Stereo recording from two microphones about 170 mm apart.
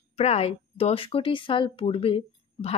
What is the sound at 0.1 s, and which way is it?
A woman's voice, 35° left (ahead or behind).